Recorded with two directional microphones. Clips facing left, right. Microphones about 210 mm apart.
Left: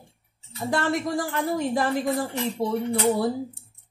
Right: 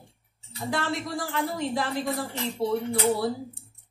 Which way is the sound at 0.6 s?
50° left (ahead or behind).